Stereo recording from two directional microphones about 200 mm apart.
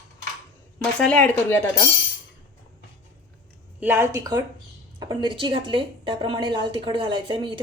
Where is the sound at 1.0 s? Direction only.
5° left (ahead or behind).